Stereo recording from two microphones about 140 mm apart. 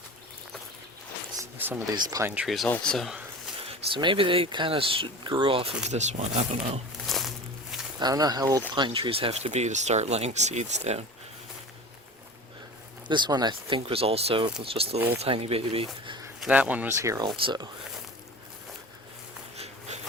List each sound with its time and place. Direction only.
1.4 s a sound: 15° right (ahead or behind)
2.0 s speech: 25° right (ahead or behind)
2.3 s speech: 5° right (ahead or behind)
2.6 s speech: 10° left (ahead or behind)
3.9 s speech: 35° right (ahead or behind); by 6.2 s 55° right (ahead or behind)
7.0 s a sound: centre (ahead or behind)
7.9 s speech: 30° right (ahead or behind)
8.7 s speech: 35° right (ahead or behind); by 11.0 s 55° right (ahead or behind)
13.1 s speech: 35° right (ahead or behind)
16.4 s speech: 10° right (ahead or behind); by 17.7 s 35° right (ahead or behind)
19.5 s a sound: 50° right (ahead or behind)